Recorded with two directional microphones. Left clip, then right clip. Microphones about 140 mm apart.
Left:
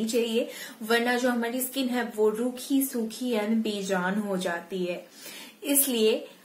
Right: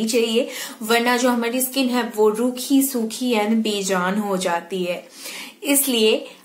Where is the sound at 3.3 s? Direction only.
10° right (ahead or behind).